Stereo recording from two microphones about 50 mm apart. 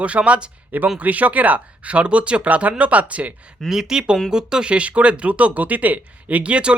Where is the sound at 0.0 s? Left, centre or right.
Right.